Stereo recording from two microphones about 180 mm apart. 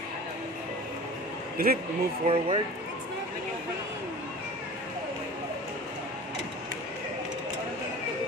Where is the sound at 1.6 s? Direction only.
55° right (ahead or behind).